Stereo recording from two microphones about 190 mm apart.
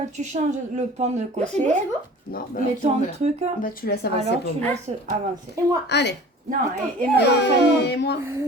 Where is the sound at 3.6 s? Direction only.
50° left (ahead or behind).